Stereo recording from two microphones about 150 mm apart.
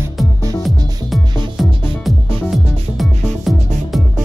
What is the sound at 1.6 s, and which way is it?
Music, centre (ahead or behind).